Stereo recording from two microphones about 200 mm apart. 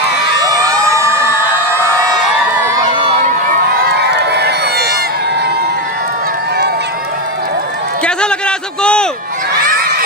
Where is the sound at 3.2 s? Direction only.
40° right (ahead or behind).